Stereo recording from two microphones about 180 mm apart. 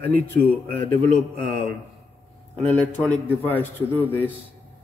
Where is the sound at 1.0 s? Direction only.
35° right (ahead or behind).